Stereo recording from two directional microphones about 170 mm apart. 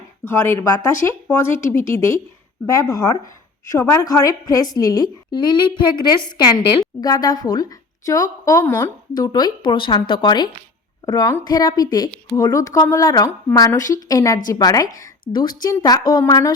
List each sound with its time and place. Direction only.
0.3 s a woman's voice: 10° left (ahead or behind)
9.2 s a woman's voice: 25° left (ahead or behind)